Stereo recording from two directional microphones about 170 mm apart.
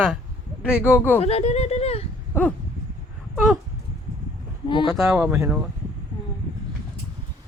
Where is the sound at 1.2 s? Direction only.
35° left (ahead or behind).